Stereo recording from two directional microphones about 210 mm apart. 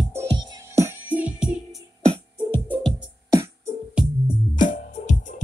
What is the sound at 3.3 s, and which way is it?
Music, 15° right (ahead or behind).